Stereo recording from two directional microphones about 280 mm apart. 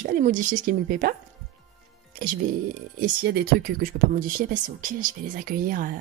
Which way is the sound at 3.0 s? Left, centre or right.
Right.